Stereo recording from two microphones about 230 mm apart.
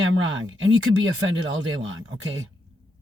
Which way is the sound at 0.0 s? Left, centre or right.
Right.